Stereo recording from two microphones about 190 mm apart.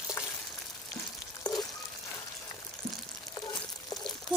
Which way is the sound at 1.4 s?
20° left (ahead or behind).